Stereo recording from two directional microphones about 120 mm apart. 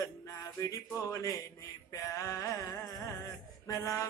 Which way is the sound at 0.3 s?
30° left (ahead or behind).